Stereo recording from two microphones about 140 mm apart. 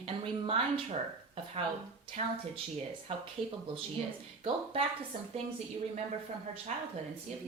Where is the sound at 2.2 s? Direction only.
50° right (ahead or behind).